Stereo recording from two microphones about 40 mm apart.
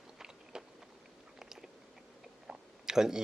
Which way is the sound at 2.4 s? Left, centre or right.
Centre.